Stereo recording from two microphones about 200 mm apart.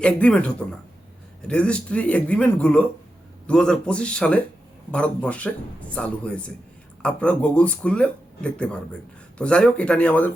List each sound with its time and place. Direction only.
0.0 s speech: 5° left (ahead or behind)